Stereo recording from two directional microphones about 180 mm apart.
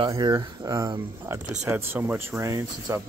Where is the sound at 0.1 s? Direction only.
20° right (ahead or behind).